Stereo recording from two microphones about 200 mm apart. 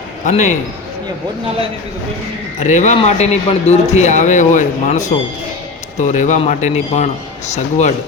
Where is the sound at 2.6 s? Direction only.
35° left (ahead or behind).